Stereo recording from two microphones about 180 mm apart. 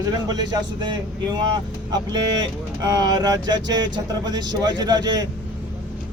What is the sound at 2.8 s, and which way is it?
Speech, 20° right (ahead or behind).